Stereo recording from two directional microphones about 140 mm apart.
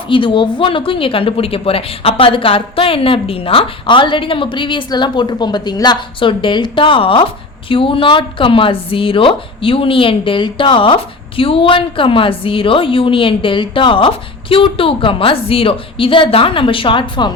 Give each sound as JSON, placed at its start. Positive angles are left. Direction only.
{"t": 0.1, "sound": "speech", "side_deg": 35}